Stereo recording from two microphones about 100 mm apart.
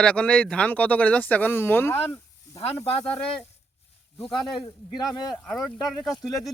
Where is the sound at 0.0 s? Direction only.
10° left (ahead or behind).